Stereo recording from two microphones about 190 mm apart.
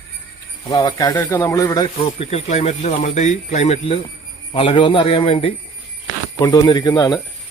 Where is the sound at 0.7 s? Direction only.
20° left (ahead or behind).